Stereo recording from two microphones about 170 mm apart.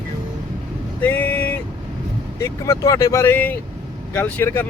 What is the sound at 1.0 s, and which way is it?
Speech, 10° left (ahead or behind).